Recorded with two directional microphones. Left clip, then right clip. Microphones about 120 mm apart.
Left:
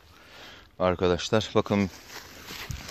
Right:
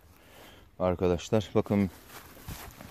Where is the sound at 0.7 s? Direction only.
5° right (ahead or behind).